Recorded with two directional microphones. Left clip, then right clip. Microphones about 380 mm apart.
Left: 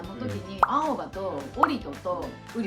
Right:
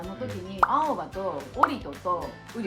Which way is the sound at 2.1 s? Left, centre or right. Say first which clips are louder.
Right 3 dB; centre.